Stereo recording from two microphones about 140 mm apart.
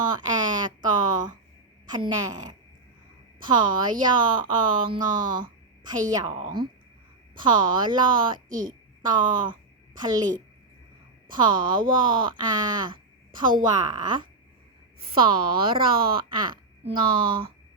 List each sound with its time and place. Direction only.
0.0 s a sound: 30° right (ahead or behind)
1.9 s a woman's voice: 30° right (ahead or behind)
8.4 s a woman's voice: 70° right (ahead or behind)
9.0 s a woman's voice: 30° right (ahead or behind)
11.3 s a woman's voice: 35° right (ahead or behind)